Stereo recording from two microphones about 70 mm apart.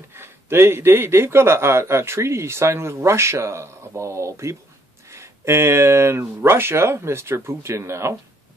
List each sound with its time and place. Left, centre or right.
0.1 s speech: right